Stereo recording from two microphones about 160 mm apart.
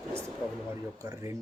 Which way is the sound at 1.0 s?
20° right (ahead or behind).